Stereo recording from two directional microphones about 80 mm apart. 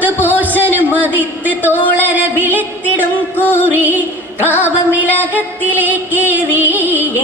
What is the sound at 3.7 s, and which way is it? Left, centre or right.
Music, right.